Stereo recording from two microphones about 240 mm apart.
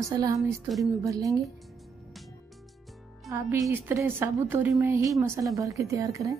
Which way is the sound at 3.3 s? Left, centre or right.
Centre.